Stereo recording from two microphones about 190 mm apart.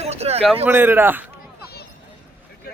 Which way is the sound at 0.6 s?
10° right (ahead or behind).